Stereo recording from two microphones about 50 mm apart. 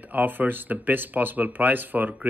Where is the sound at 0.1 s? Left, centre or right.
Right.